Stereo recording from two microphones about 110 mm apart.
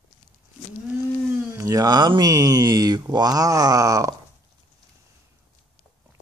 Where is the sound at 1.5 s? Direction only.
30° right (ahead or behind).